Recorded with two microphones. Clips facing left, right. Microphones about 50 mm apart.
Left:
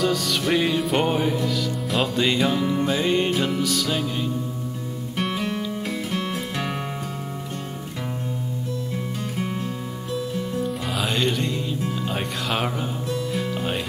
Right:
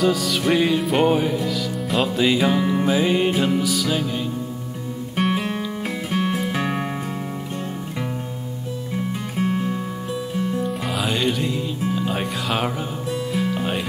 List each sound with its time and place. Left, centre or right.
0.0 s music: centre
5.1 s music: centre
9.4 s music: centre
11.0 s music: centre
11.9 s speech: centre
13.3 s music: centre